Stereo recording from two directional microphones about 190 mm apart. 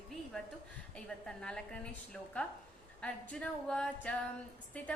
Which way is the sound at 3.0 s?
5° left (ahead or behind).